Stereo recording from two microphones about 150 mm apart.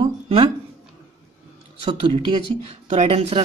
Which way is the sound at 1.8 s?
35° right (ahead or behind).